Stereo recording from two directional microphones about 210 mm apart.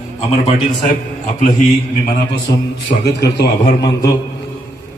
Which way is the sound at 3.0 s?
55° left (ahead or behind).